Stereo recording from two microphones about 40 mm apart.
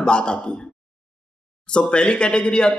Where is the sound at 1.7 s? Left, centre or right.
Left.